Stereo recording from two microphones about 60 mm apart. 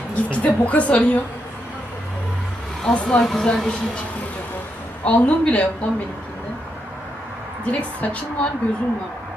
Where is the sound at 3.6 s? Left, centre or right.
Centre.